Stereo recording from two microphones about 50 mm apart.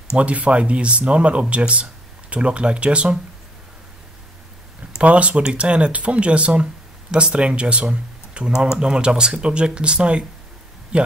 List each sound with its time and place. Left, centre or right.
0.1 s speech: right
4.9 s speech: right